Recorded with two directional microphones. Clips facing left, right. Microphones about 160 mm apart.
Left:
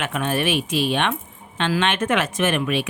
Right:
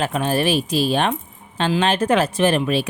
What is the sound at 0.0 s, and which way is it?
Speech, 35° right (ahead or behind).